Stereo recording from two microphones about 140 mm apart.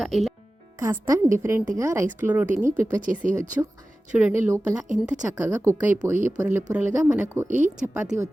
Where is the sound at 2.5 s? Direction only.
65° right (ahead or behind).